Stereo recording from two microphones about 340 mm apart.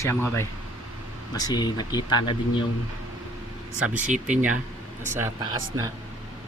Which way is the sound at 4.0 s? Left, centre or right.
Right.